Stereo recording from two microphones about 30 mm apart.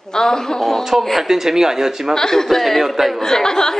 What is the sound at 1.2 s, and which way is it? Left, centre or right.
Speech, centre.